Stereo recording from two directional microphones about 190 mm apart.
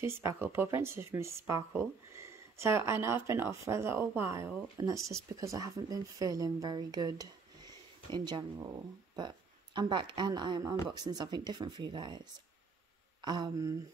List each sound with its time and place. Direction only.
0.0 s speech: 15° right (ahead or behind)
4.9 s speech: centre (ahead or behind)
5.3 s speech: 15° right (ahead or behind)
13.2 s speech: 20° right (ahead or behind)